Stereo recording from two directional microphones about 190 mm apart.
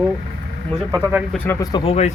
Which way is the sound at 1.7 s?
30° left (ahead or behind).